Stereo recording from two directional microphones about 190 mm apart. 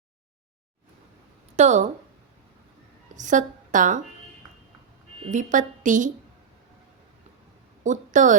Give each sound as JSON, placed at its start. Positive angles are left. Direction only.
{"t": 1.5, "sound": "a woman's voice", "side_deg": -35}
{"t": 3.2, "sound": "a woman's voice", "side_deg": -40}
{"t": 5.2, "sound": "a woman's voice", "side_deg": -40}
{"t": 7.9, "sound": "a woman's voice", "side_deg": -40}